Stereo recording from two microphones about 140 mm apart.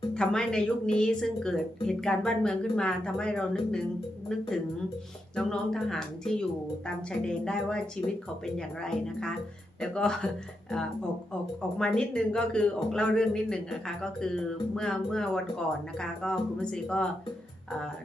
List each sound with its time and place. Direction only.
0.1 s speech: 5° left (ahead or behind)